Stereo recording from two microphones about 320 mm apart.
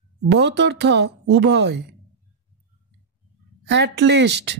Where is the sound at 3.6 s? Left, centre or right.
Right.